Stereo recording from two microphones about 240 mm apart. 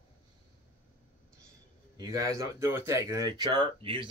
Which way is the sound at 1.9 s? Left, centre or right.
Centre.